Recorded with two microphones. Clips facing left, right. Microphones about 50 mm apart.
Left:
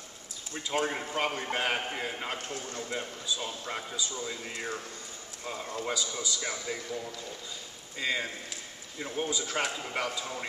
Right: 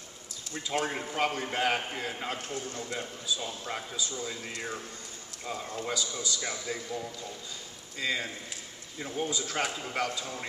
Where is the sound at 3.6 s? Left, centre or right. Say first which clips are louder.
Even; centre.